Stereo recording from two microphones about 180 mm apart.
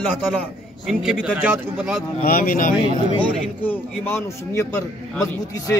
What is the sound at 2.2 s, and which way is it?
Speech, 50° left (ahead or behind).